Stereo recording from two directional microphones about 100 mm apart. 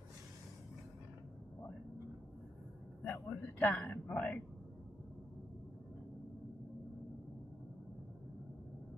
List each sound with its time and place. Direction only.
3.0 s a man's voice: 15° left (ahead or behind)